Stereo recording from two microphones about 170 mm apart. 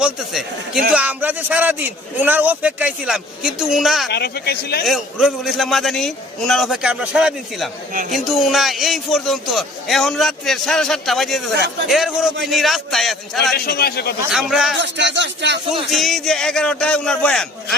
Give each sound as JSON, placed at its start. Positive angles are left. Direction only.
{"t": 0.0, "sound": "a man's voice", "side_deg": 0}
{"t": 4.1, "sound": "speech", "side_deg": 70}
{"t": 4.9, "sound": "a man's voice", "side_deg": 0}
{"t": 13.5, "sound": "speech", "side_deg": 65}
{"t": 14.3, "sound": "a man's voice", "side_deg": -5}
{"t": 14.8, "sound": "speech", "side_deg": -90}
{"t": 15.9, "sound": "a man's voice", "side_deg": 0}